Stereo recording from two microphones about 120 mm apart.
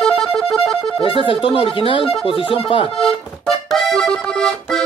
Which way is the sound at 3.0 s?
Centre (ahead or behind).